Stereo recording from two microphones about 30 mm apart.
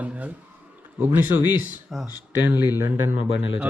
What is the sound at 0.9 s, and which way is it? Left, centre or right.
Speech, right.